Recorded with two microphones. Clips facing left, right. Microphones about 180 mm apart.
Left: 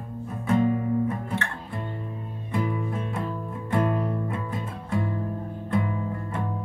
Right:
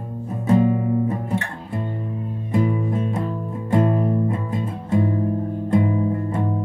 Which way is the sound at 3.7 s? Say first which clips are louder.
Right 6 dB; 25° right (ahead or behind).